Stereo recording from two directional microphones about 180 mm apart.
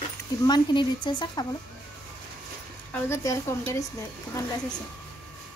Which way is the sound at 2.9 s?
15° left (ahead or behind).